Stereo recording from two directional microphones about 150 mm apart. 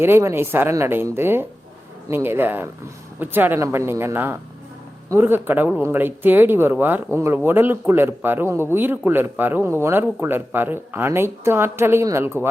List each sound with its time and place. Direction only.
0.0 s speech: 15° right (ahead or behind)